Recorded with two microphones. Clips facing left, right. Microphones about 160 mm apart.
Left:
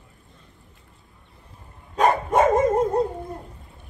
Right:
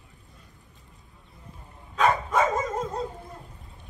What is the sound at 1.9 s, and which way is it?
Dog, 50° left (ahead or behind).